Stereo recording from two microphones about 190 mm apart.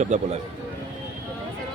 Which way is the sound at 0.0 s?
35° right (ahead or behind).